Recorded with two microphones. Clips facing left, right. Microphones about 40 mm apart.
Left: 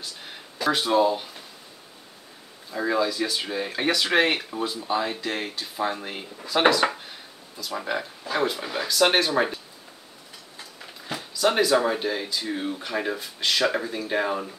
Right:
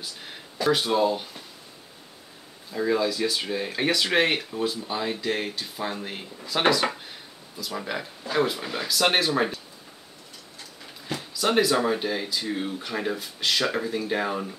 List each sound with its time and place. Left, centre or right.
0.0 s speech: centre
2.7 s speech: centre
11.1 s speech: centre